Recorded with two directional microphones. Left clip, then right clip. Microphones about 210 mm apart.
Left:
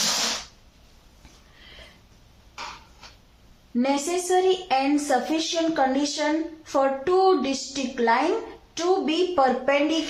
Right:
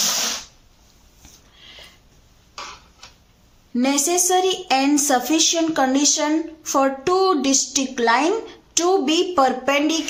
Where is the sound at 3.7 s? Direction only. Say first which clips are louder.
Right 4 dB; 45° right (ahead or behind).